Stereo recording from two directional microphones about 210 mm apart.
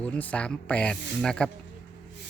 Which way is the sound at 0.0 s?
5° left (ahead or behind).